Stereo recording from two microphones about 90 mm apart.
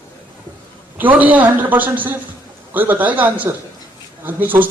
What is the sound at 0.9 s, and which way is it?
Speech, 20° right (ahead or behind).